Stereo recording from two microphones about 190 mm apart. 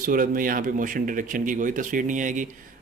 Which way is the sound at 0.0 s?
45° right (ahead or behind).